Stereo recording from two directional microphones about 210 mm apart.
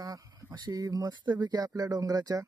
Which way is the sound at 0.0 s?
15° right (ahead or behind).